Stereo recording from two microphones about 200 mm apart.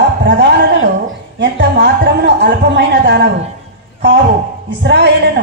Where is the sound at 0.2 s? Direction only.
60° right (ahead or behind).